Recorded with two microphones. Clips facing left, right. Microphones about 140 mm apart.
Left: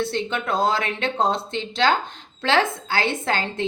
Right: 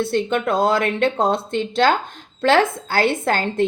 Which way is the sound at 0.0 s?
50° right (ahead or behind).